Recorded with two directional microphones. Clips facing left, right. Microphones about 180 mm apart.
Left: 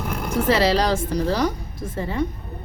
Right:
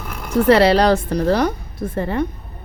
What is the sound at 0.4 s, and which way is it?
Speech, 60° right (ahead or behind).